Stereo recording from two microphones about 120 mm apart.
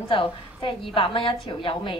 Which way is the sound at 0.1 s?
50° left (ahead or behind).